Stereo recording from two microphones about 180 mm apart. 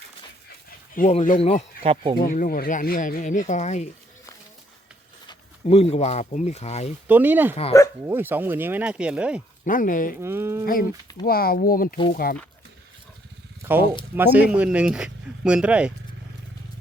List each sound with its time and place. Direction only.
1.0 s speech: 40° left (ahead or behind)
1.8 s speech: 35° right (ahead or behind)
2.1 s speech: 50° left (ahead or behind)
5.6 s speech: 35° left (ahead or behind)
7.1 s speech: 10° right (ahead or behind)
9.6 s speech: 50° left (ahead or behind)
10.2 s speech: 15° right (ahead or behind)
11.3 s speech: 55° left (ahead or behind)
13.6 s a sound: 10° right (ahead or behind)
14.2 s speech: 10° right (ahead or behind)